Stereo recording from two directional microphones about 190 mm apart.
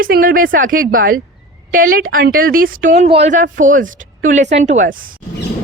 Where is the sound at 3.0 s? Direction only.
30° right (ahead or behind).